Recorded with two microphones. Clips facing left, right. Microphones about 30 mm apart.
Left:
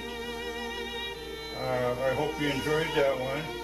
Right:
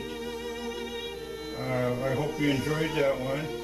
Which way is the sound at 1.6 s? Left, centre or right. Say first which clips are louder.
Left 1 dB; centre.